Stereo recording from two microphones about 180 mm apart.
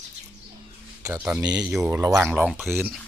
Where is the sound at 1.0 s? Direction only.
10° right (ahead or behind).